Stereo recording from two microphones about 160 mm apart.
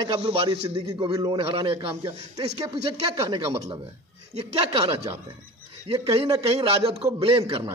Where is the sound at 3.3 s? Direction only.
30° right (ahead or behind).